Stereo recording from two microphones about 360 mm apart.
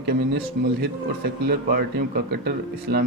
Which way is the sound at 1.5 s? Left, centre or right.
Right.